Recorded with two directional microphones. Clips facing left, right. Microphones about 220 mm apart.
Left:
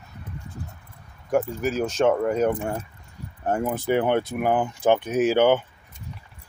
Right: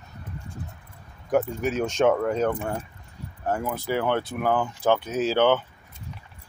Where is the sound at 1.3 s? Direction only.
Centre (ahead or behind).